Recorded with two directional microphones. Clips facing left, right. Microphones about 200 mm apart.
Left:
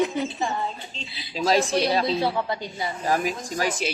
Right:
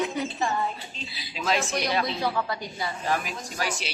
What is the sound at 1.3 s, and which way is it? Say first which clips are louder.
Speech: left 6 dB; 35° left (ahead or behind).